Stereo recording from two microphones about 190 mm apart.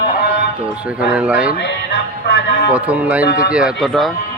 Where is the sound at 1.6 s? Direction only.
70° left (ahead or behind).